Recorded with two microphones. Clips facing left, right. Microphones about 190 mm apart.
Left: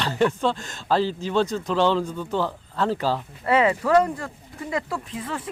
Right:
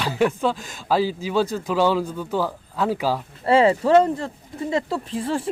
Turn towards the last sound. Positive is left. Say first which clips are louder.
# right 6 dB
turn(degrees=-30)  # may be behind; listen again after turning